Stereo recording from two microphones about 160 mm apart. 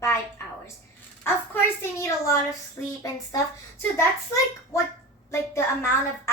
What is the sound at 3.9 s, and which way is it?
Speech, 20° left (ahead or behind).